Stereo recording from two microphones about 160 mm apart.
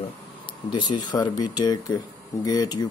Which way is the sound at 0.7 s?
30° left (ahead or behind).